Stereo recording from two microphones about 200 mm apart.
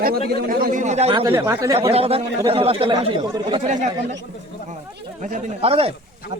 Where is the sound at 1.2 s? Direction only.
15° right (ahead or behind).